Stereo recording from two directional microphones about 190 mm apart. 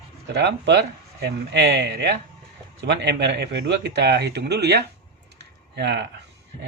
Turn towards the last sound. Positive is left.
turn(degrees=-65)  # may be behind; listen again after turning